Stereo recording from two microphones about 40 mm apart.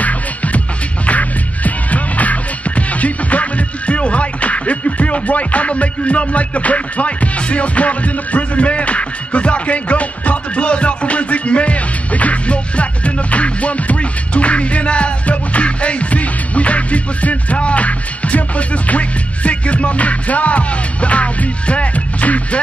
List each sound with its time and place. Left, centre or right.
0.0 s music: left